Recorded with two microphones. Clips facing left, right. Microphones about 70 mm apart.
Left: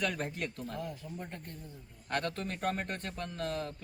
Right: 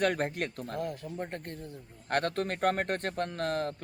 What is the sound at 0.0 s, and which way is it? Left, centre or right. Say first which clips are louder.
A man's voice: right 6 dB; right.